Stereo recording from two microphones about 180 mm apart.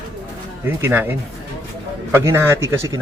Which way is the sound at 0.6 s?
15° right (ahead or behind).